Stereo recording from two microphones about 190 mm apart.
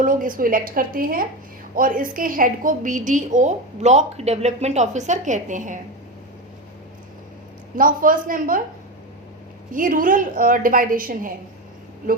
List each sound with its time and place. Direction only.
0.0 s a woman's voice: 45° right (ahead or behind)
7.8 s a woman's voice: 45° right (ahead or behind)
9.7 s a woman's voice: 45° right (ahead or behind)